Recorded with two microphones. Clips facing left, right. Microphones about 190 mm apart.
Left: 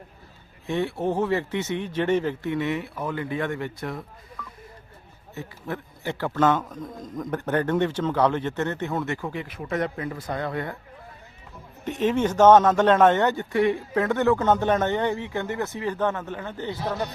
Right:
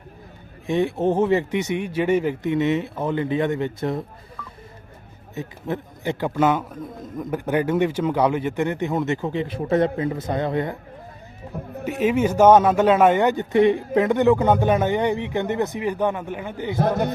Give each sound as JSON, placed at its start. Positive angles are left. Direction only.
{"t": 0.7, "sound": "speech", "side_deg": -20}
{"t": 5.3, "sound": "a man's voice", "side_deg": -20}
{"t": 11.5, "sound": "speech", "side_deg": -60}
{"t": 11.9, "sound": "a man's voice", "side_deg": -10}
{"t": 16.7, "sound": "a man's voice", "side_deg": -50}